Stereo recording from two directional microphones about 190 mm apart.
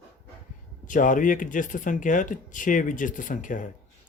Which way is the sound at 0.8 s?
45° left (ahead or behind).